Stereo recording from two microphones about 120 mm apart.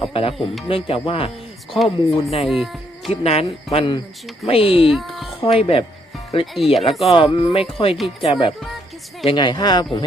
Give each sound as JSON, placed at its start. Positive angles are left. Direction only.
{"t": 0.0, "sound": "speech", "side_deg": 50}
{"t": 1.8, "sound": "speech", "side_deg": 0}
{"t": 3.1, "sound": "speech", "side_deg": 60}
{"t": 4.9, "sound": "speech", "side_deg": 0}
{"t": 5.4, "sound": "speech", "side_deg": 50}
{"t": 6.4, "sound": "speech", "side_deg": 0}
{"t": 7.0, "sound": "speech", "side_deg": 55}